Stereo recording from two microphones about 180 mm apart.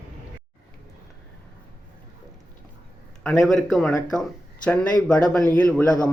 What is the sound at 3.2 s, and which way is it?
A man's voice, centre (ahead or behind).